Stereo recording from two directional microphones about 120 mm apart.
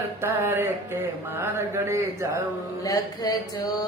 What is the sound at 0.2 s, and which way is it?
Mantra, 20° right (ahead or behind).